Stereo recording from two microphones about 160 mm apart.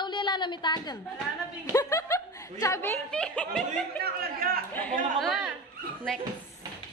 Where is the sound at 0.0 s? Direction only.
30° left (ahead or behind).